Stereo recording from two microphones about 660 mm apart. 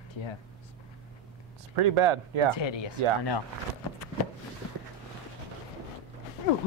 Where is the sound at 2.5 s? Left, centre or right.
Left.